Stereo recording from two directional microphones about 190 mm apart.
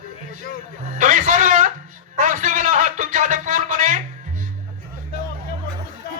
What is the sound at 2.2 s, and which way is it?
Music, 45° right (ahead or behind).